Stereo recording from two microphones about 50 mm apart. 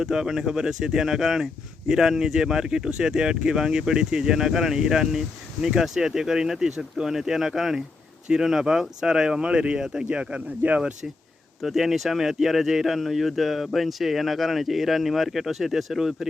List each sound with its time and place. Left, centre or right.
0.0 s speech: centre
10.6 s speech: right
11.6 s speech: centre